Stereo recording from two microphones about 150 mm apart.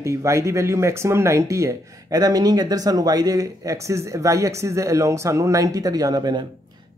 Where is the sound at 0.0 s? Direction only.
20° right (ahead or behind).